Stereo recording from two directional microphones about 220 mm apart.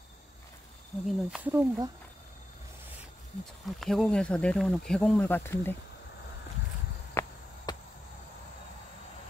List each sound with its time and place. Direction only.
1.0 s speech: 5° right (ahead or behind)
3.8 s speech: centre (ahead or behind)
7.2 s chop: 10° left (ahead or behind)
7.7 s a sound: 20° left (ahead or behind)